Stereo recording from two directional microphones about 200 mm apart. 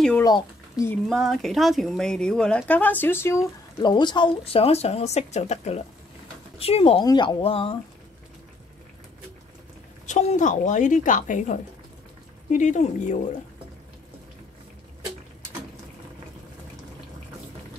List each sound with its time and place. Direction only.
0.2 s speech: 15° left (ahead or behind)
1.0 s speech: centre (ahead or behind); by 7.8 s 30° left (ahead or behind)
10.0 s speech: 35° left (ahead or behind)